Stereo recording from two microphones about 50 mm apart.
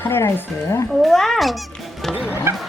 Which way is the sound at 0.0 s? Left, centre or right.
Left.